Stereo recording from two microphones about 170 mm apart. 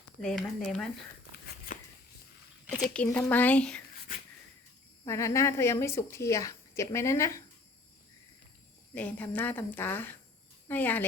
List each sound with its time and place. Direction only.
0.2 s speech: centre (ahead or behind)
1.5 s walk: 55° left (ahead or behind)
2.8 s speech: 5° left (ahead or behind)
5.0 s speech: 20° left (ahead or behind)
9.0 s speech: 10° left (ahead or behind)